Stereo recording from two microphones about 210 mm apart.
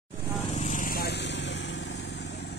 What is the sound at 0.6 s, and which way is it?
Vehicle, 35° left (ahead or behind).